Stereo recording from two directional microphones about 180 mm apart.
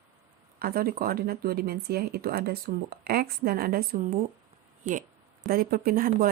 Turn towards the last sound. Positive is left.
turn(degrees=-50)  # may be behind; listen again after turning